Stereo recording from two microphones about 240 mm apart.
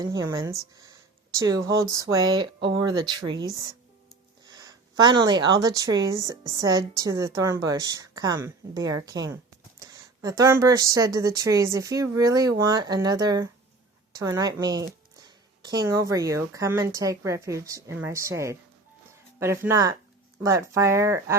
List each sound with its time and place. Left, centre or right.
0.0 s a woman's voice: centre